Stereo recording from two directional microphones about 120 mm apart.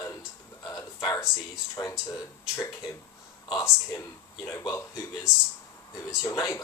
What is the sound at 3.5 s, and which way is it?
Speech, 25° left (ahead or behind).